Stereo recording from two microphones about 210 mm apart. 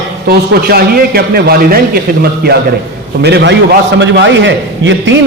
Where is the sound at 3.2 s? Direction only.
50° right (ahead or behind).